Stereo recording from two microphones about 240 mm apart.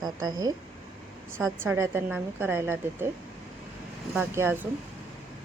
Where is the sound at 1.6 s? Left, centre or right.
Centre.